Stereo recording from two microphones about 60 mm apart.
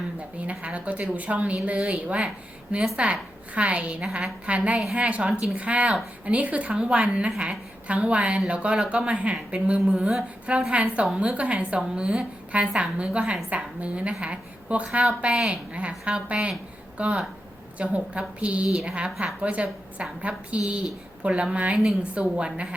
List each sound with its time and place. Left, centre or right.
0.3 s a woman's voice: right
7.3 s a woman's voice: centre
7.9 s a woman's voice: right